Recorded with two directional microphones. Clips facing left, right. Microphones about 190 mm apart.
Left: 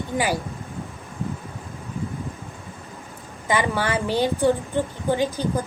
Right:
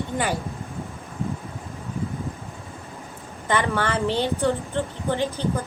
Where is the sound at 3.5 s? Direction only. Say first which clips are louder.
Left 1 dB; 10° left (ahead or behind).